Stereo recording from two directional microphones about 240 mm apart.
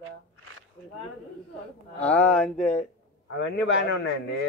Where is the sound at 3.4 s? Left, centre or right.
Left.